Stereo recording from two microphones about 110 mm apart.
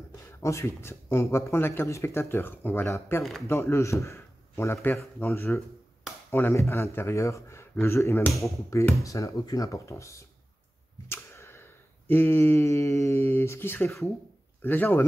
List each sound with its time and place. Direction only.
0.3 s speech: 25° left (ahead or behind)
11.1 s a sound: 20° left (ahead or behind)
14.6 s speech: 20° left (ahead or behind)